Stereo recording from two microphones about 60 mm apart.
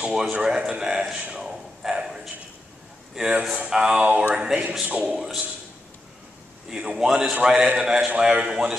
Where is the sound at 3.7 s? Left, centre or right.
Centre.